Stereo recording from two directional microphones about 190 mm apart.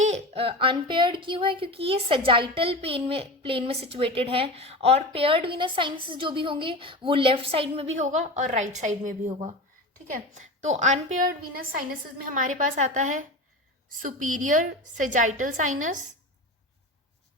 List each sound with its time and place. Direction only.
0.0 s a woman's voice: 35° right (ahead or behind)